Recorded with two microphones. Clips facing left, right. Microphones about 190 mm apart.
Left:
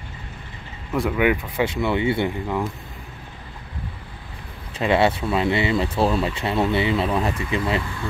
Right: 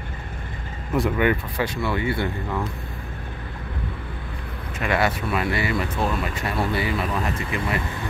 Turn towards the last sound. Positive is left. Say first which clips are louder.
# left 3 dB
turn(degrees=25)  # may be behind; listen again after turning